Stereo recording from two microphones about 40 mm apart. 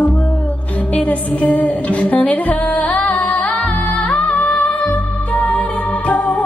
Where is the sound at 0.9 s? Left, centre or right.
Left.